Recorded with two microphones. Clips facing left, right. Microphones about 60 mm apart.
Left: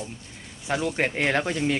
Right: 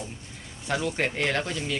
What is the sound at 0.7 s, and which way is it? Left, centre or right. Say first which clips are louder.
Speech: left 2 dB; centre.